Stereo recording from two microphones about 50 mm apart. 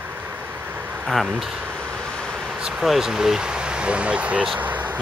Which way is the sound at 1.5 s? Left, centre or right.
Right.